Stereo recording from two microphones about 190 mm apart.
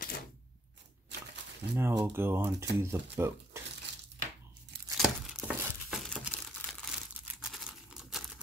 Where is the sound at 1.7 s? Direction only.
15° right (ahead or behind).